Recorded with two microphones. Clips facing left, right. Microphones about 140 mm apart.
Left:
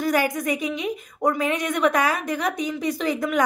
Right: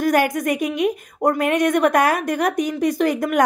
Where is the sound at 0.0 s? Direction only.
55° right (ahead or behind).